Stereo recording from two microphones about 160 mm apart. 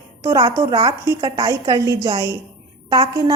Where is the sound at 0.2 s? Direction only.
20° right (ahead or behind).